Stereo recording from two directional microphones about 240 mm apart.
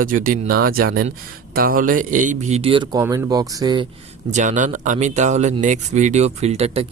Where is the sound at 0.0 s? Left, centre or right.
Right; by 3.8 s centre.